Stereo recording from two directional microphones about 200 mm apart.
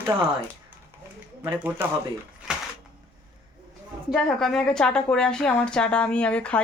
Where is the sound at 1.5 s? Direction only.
10° right (ahead or behind).